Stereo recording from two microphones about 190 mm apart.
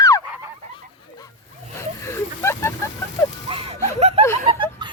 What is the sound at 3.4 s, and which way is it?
Music, 30° right (ahead or behind).